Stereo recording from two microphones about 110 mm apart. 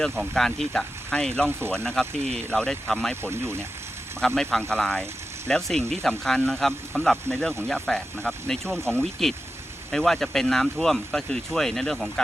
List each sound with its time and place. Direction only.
0.0 s speech: 5° left (ahead or behind)
1.5 s speech: 20° right (ahead or behind)
1.7 s speech: 5° left (ahead or behind)
3.2 s speech: 20° right (ahead or behind)
4.2 s speech: 5° left (ahead or behind)